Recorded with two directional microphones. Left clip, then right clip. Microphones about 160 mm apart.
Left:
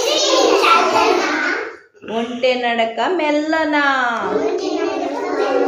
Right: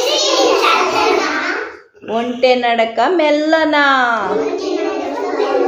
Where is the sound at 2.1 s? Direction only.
45° right (ahead or behind).